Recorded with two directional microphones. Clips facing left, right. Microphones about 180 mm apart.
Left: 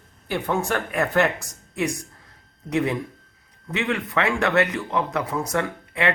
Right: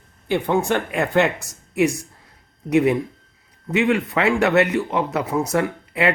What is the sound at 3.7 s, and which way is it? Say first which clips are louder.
Speech: right 6 dB; 20° right (ahead or behind).